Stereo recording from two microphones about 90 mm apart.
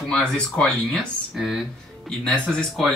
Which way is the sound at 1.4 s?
5° right (ahead or behind).